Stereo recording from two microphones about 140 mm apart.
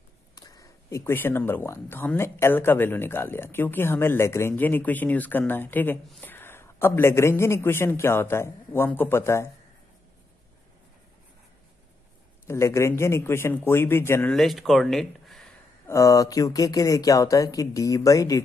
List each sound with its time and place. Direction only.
0.4 s speech: 25° left (ahead or behind)
12.4 s speech: 20° left (ahead or behind)
14.3 s speech: centre (ahead or behind)
15.9 s speech: 20° left (ahead or behind)